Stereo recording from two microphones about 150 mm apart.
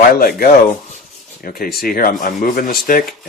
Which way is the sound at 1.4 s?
75° left (ahead or behind).